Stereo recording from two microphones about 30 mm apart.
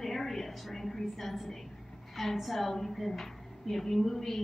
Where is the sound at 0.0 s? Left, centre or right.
Centre.